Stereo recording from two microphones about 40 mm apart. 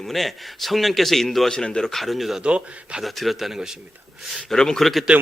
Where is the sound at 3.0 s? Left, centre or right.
Centre.